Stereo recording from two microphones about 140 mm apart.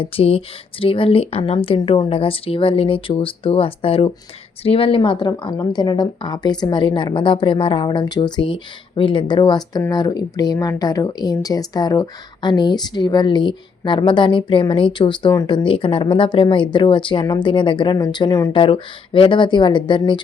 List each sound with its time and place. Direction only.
0.0 s a woman's voice: 40° left (ahead or behind); by 18.5 s 25° left (ahead or behind)
18.5 s a woman's voice: 40° left (ahead or behind)